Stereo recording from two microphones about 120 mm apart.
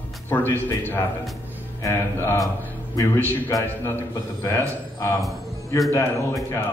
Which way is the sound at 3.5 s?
20° left (ahead or behind).